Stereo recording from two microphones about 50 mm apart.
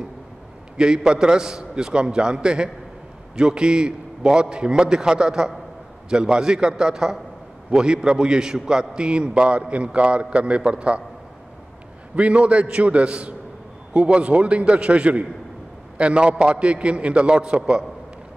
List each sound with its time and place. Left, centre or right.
0.7 s a man's voice: centre
12.2 s a man's voice: right